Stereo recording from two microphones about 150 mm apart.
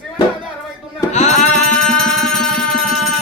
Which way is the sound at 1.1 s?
50° left (ahead or behind).